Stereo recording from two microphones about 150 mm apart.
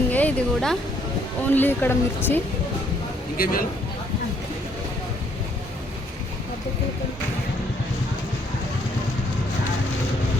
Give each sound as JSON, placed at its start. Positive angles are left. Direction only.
{"t": 0.1, "sound": "speech", "side_deg": 10}
{"t": 3.3, "sound": "speech", "side_deg": 75}